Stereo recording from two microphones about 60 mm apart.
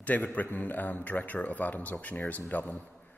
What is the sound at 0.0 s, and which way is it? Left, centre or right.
Speech, left.